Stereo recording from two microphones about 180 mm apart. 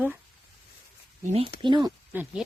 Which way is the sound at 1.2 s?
35° right (ahead or behind).